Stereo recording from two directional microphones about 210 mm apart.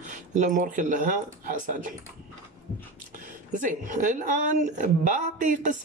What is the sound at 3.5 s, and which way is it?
Speech, 40° right (ahead or behind).